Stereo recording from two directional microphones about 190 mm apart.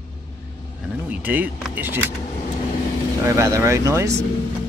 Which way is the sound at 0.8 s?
10° right (ahead or behind).